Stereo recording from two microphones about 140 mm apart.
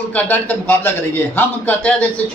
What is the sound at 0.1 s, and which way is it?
A man's voice, 10° left (ahead or behind).